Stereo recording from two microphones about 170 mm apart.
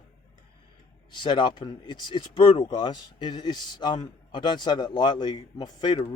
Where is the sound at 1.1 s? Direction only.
25° left (ahead or behind).